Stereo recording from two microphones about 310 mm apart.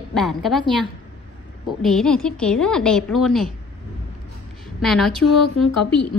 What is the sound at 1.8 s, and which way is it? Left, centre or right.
A woman's voice, centre.